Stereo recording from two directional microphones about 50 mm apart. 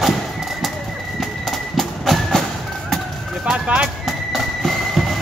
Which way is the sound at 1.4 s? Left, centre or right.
Centre.